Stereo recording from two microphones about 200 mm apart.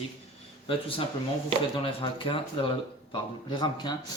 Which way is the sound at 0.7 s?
25° left (ahead or behind).